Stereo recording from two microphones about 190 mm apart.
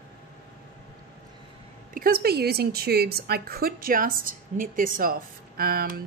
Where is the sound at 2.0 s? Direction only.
55° right (ahead or behind).